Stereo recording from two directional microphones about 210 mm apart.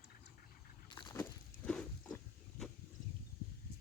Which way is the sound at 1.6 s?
5° left (ahead or behind).